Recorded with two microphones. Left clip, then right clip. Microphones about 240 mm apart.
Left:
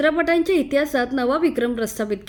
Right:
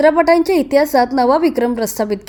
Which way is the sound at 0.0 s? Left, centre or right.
Centre.